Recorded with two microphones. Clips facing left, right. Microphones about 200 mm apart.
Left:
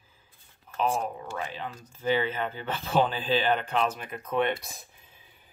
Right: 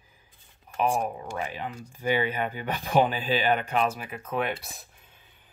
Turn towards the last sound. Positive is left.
turn(degrees=-5)  # may be behind; listen again after turning